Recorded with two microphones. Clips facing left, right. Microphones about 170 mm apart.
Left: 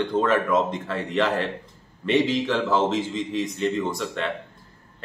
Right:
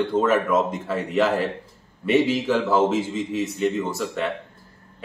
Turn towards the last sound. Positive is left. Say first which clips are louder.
# right 1 dB
turn(degrees=-5)  # may be behind; listen again after turning